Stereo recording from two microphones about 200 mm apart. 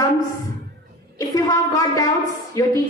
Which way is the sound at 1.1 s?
20° left (ahead or behind).